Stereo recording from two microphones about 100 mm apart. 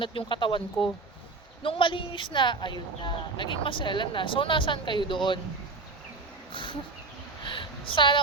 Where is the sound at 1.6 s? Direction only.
60° left (ahead or behind).